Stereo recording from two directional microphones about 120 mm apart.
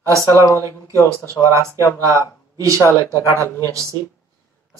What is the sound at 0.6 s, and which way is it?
Speech, 25° right (ahead or behind).